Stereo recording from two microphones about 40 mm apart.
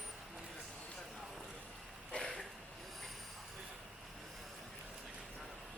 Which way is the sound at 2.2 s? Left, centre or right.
Centre.